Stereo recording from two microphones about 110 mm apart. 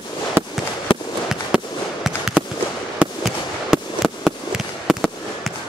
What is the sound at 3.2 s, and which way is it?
Fireworks, centre (ahead or behind).